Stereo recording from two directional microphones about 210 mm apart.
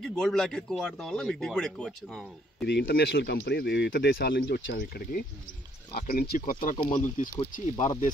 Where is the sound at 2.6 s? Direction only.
50° left (ahead or behind).